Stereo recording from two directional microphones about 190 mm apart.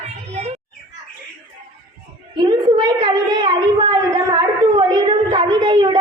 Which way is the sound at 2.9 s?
20° right (ahead or behind).